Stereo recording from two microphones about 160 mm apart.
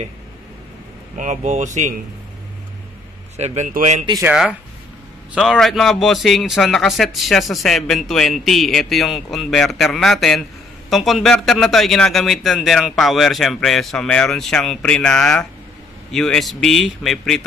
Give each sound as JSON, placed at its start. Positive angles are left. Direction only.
{"t": 1.1, "sound": "speech", "side_deg": -50}
{"t": 3.3, "sound": "speech", "side_deg": -45}
{"t": 4.2, "sound": "a man's voice", "side_deg": -5}